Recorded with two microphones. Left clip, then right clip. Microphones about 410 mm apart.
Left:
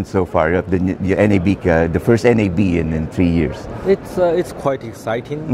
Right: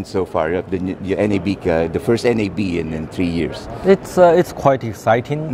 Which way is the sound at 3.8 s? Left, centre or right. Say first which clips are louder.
Right 4 dB; right.